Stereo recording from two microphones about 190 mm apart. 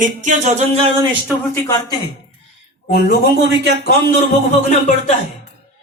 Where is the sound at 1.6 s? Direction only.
15° left (ahead or behind).